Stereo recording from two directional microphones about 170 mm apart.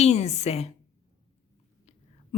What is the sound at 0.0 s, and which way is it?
Speech, 40° left (ahead or behind).